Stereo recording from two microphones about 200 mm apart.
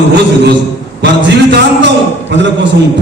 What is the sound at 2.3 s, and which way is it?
Speech, 60° right (ahead or behind).